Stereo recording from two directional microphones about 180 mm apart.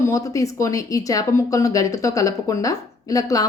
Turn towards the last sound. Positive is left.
turn(degrees=20)  # may be behind; listen again after turning